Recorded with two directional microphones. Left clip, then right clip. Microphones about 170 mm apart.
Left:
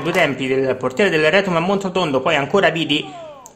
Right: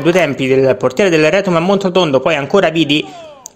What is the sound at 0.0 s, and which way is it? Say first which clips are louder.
Speech: right 5 dB; 35° right (ahead or behind).